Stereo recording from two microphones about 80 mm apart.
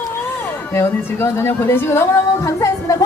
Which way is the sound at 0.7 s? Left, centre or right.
Left.